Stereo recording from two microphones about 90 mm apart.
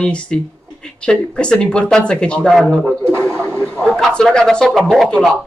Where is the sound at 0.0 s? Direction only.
10° left (ahead or behind).